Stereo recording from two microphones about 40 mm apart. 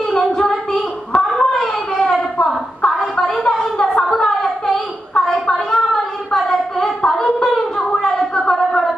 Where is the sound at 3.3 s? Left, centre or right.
Centre.